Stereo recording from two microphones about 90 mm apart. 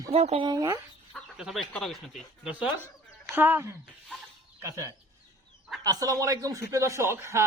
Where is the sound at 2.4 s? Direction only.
15° right (ahead or behind).